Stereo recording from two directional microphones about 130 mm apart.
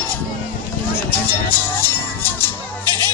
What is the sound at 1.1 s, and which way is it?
Music, 15° left (ahead or behind).